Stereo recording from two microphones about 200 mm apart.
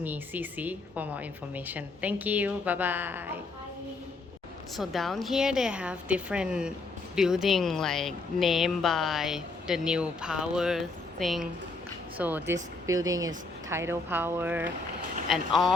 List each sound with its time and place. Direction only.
0.0 s a woman's voice: 10° right (ahead or behind)
4.8 s a woman's voice: centre (ahead or behind)